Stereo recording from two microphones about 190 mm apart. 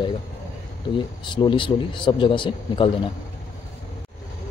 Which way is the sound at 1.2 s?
25° left (ahead or behind).